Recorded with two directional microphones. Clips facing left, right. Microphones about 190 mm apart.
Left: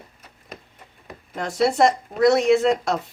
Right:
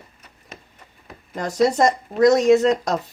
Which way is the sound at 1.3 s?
40° right (ahead or behind).